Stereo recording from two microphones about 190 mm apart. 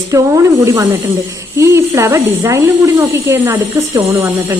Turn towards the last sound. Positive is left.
turn(degrees=-15)  # may be behind; listen again after turning